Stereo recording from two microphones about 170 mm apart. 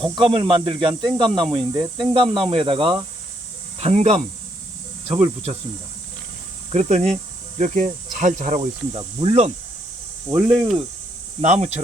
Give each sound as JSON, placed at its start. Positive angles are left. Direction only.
{"t": 0.0, "sound": "speech", "side_deg": -30}
{"t": 6.7, "sound": "speech", "side_deg": -40}
{"t": 8.9, "sound": "speech", "side_deg": -30}
{"t": 10.3, "sound": "speech", "side_deg": -15}
{"t": 11.3, "sound": "speech", "side_deg": -40}